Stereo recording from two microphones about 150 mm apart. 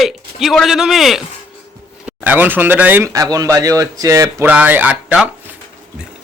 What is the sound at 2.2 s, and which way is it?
Speech, 10° right (ahead or behind).